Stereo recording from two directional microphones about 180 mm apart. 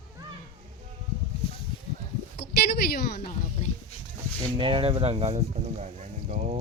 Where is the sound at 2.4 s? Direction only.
60° left (ahead or behind).